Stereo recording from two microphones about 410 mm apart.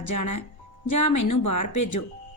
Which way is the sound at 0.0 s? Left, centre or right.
Left.